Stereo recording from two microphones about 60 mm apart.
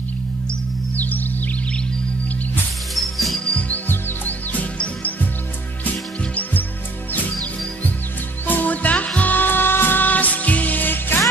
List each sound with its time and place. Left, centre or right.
0.9 s music: left
2.9 s music: centre
3.4 s music: left
8.5 s music: left